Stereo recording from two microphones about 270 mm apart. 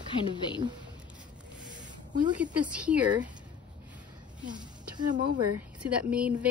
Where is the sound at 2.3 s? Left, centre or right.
Centre.